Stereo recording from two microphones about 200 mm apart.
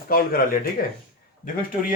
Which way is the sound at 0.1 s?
45° left (ahead or behind).